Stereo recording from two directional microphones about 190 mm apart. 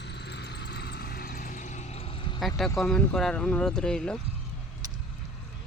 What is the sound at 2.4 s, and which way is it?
Speech, centre (ahead or behind).